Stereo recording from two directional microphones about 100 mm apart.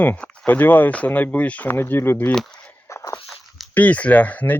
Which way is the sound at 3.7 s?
15° left (ahead or behind).